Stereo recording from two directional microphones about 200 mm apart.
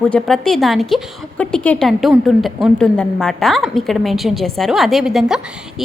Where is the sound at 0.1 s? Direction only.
Centre (ahead or behind).